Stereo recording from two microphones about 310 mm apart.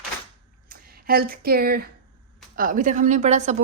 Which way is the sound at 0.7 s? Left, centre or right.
Right.